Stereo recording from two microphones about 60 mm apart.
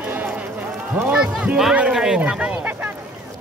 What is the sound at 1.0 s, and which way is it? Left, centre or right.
A man's voice, centre.